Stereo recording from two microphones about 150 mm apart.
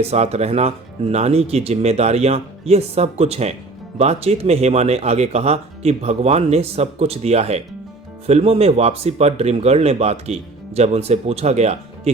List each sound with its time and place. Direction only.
0.0 s speech: 45° right (ahead or behind)